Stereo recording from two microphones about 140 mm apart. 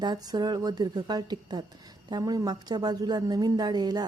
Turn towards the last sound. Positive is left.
turn(degrees=-30)  # may be behind; listen again after turning